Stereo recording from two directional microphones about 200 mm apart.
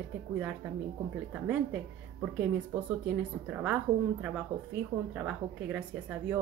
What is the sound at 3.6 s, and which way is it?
A woman's voice, 5° right (ahead or behind).